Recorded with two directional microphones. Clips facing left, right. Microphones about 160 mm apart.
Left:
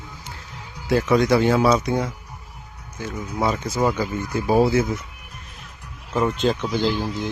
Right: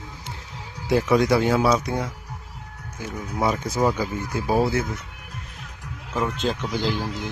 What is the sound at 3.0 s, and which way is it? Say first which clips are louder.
Speech: left 1 dB; 10° right (ahead or behind).